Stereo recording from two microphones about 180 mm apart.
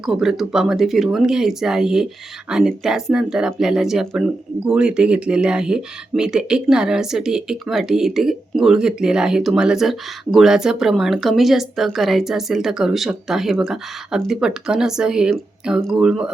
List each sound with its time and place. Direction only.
0.0 s speech: centre (ahead or behind)